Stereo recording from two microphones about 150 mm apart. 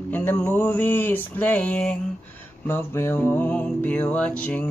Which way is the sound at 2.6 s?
15° left (ahead or behind).